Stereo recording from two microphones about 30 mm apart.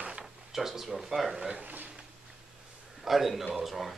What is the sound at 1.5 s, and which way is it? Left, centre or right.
Speech, right.